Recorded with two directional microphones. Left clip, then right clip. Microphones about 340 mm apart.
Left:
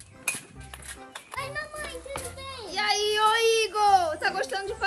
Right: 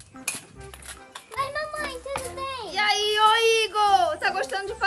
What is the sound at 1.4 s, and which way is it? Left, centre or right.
Music, right.